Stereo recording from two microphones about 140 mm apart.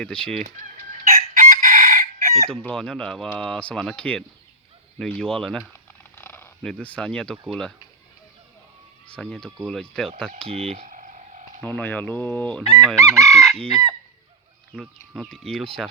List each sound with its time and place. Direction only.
0.0 s speech: 5° left (ahead or behind)
1.0 s chicken: 70° right (ahead or behind)
2.5 s speech: 5° left (ahead or behind)
6.0 s a sound: 15° left (ahead or behind)
6.6 s speech: 5° left (ahead or behind)
9.0 s speech: 5° left (ahead or behind)
10.5 s speech: 45° right (ahead or behind)
10.8 s frog: 65° right (ahead or behind)
11.6 s fowl: 15° left (ahead or behind)
13.0 s chicken: 25° right (ahead or behind)
13.6 s speech: 5° left (ahead or behind)